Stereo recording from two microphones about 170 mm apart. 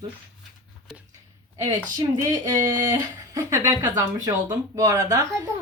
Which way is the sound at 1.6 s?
20° right (ahead or behind).